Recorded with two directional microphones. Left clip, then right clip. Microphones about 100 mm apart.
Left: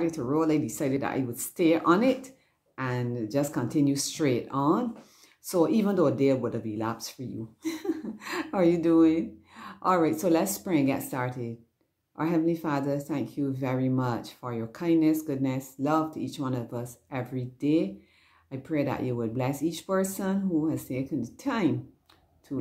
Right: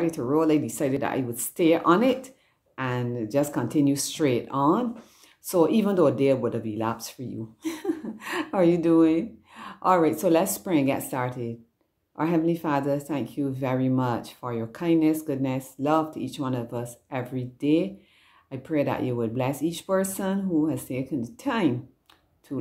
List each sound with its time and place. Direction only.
0.0 s speech: 20° right (ahead or behind)